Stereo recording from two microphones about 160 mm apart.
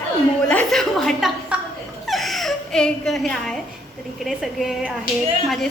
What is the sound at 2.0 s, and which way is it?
Whimper, centre (ahead or behind).